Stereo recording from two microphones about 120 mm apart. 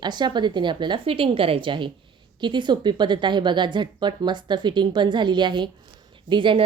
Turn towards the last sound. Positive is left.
turn(degrees=-45)  # may be behind; listen again after turning